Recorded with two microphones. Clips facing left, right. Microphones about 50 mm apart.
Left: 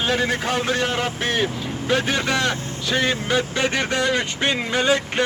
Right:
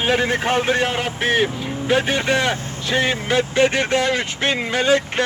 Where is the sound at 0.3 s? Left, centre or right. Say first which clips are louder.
Right 3 dB; right.